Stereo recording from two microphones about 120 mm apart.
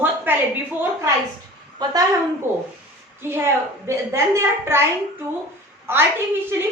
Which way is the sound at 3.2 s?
20° right (ahead or behind).